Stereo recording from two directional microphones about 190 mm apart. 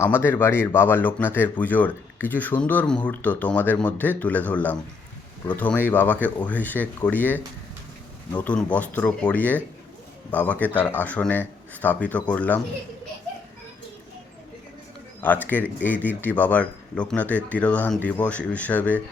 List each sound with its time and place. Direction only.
0.0 s speech: 10° left (ahead or behind)
15.2 s speech: 10° left (ahead or behind)